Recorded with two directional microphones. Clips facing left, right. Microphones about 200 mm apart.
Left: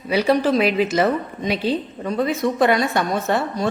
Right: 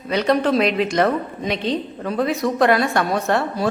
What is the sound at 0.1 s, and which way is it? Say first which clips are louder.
A woman's voice: even; 5° left (ahead or behind).